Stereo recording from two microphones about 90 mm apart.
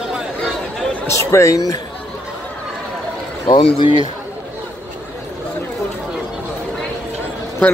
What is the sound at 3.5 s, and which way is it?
Speech, 70° left (ahead or behind).